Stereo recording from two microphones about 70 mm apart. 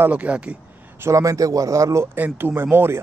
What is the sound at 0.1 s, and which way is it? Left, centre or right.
Speech, centre.